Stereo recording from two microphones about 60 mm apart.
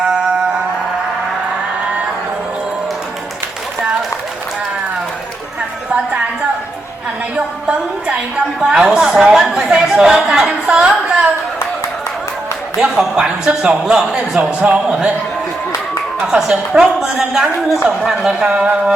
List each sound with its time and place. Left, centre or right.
7.3 s a woman's voice: centre
10.7 s a sound: centre
12.8 s a woman's voice: centre
16.2 s a woman's voice: centre